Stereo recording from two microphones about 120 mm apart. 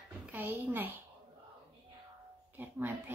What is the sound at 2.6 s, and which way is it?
Speech, 15° right (ahead or behind).